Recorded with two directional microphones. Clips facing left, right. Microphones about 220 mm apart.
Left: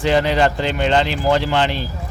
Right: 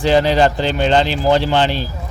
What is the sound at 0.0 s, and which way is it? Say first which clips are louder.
Speech: right 3 dB; 30° right (ahead or behind).